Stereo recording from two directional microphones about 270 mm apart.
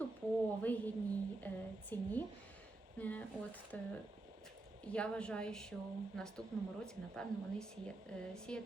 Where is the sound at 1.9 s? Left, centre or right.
Centre.